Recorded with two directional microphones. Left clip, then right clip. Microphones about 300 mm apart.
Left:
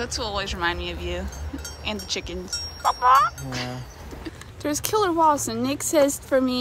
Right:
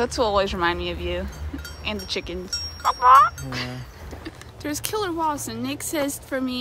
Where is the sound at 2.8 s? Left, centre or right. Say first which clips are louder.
Right 3 dB; centre.